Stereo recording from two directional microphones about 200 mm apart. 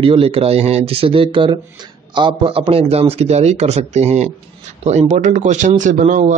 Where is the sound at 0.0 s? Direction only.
25° right (ahead or behind).